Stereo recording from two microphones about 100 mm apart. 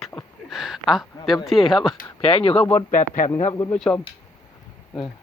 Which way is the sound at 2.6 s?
15° left (ahead or behind).